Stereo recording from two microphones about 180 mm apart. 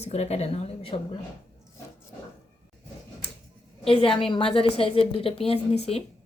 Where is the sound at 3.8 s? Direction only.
30° left (ahead or behind).